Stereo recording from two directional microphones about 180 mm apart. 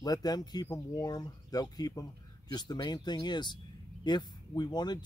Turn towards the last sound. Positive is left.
turn(degrees=25)  # may be behind; listen again after turning